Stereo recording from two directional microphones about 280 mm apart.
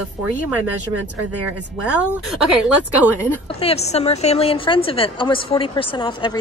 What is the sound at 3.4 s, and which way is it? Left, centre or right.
A woman's voice, left.